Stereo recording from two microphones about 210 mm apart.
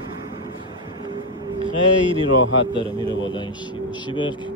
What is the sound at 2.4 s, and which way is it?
Speech, 65° left (ahead or behind).